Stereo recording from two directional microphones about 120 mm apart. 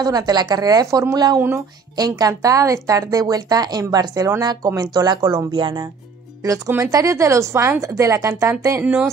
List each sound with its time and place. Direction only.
0.0 s a woman's voice: 35° right (ahead or behind)
6.4 s speech: 25° right (ahead or behind)